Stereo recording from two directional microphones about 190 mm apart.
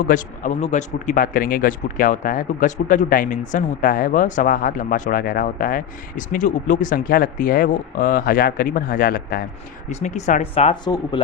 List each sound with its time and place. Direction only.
0.0 s speech: 45° left (ahead or behind)
9.9 s speech: 40° left (ahead or behind)
10.8 s speech: 20° left (ahead or behind)